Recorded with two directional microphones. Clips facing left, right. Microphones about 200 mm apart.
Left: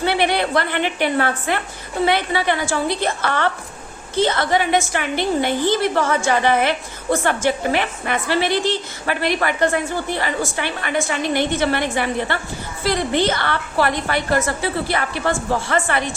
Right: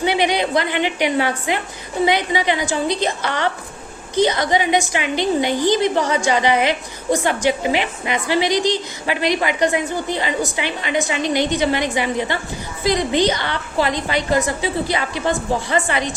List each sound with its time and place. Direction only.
0.0 s a woman's voice: 15° right (ahead or behind)